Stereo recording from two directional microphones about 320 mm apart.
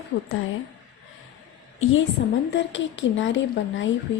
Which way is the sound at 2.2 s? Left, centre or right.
Left.